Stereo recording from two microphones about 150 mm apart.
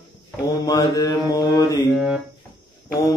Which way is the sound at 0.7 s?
25° left (ahead or behind).